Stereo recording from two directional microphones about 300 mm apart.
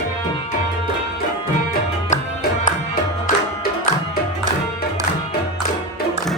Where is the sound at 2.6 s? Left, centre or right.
Left.